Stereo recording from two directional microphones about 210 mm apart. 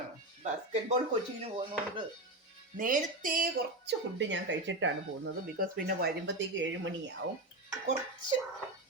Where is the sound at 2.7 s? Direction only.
40° right (ahead or behind); by 5.3 s 60° right (ahead or behind).